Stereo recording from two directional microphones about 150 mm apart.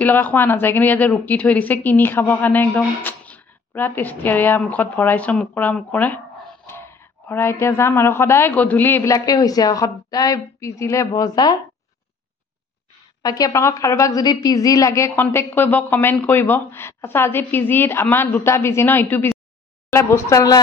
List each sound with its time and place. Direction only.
0.0 s speech: 10° left (ahead or behind)
13.2 s speech: 25° left (ahead or behind)